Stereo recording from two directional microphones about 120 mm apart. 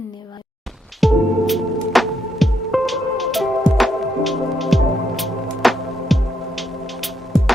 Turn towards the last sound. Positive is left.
turn(degrees=0)  # may be behind; listen again after turning